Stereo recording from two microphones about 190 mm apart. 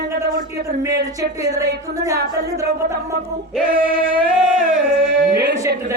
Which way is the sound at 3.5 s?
5° right (ahead or behind).